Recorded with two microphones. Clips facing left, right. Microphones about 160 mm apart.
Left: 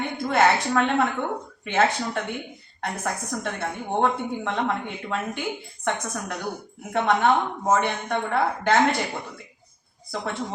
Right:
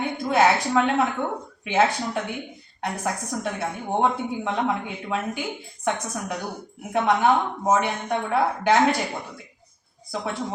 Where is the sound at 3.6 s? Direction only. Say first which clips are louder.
Even; 10° right (ahead or behind).